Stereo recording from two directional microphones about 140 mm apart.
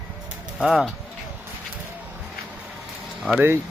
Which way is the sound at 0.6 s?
5° right (ahead or behind).